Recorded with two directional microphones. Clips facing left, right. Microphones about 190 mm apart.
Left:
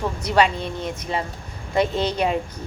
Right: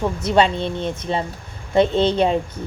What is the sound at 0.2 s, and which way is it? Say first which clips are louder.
A woman's voice: right 2 dB; 25° right (ahead or behind).